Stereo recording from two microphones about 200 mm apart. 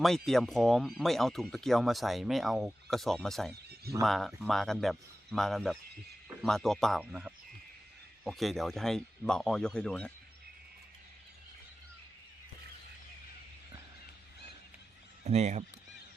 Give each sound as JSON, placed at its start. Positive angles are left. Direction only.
{"t": 0.0, "sound": "speech", "side_deg": 0}
{"t": 15.2, "sound": "speech", "side_deg": -35}